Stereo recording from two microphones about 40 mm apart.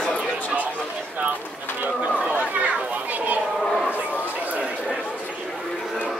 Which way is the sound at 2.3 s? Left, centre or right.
Right.